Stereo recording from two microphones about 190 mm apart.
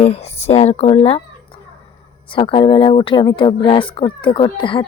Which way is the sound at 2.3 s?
25° left (ahead or behind).